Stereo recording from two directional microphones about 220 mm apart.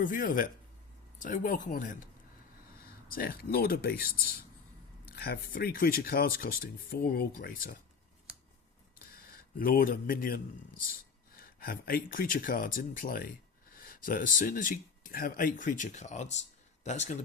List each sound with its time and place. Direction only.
0.0 s speech: 40° left (ahead or behind)
3.1 s speech: 40° left (ahead or behind)
9.6 s speech: 40° left (ahead or behind)